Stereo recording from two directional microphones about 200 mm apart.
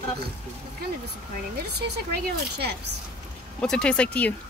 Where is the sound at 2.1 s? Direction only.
55° right (ahead or behind).